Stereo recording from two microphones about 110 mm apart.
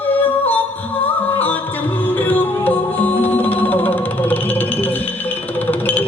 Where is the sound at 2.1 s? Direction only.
15° left (ahead or behind).